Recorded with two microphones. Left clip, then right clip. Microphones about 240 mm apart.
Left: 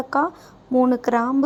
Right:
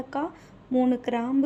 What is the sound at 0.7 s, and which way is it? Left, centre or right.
Speech, centre.